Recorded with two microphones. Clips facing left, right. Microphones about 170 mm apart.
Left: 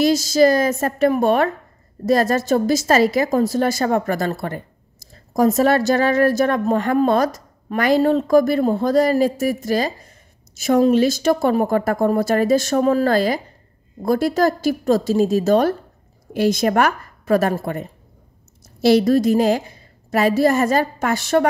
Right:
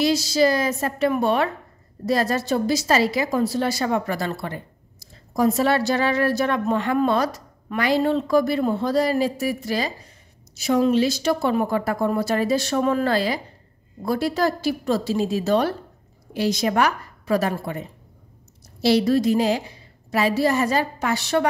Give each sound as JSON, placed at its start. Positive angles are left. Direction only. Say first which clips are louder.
{"t": 0.0, "sound": "a woman's voice", "louder": "left 4 dB", "side_deg": 45}